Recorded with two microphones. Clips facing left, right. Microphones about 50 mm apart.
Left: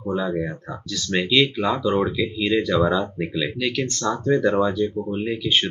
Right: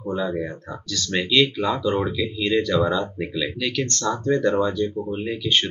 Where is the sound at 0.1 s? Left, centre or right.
Centre.